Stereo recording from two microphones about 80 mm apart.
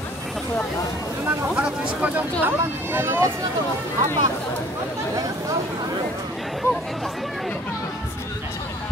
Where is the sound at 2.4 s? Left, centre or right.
Right.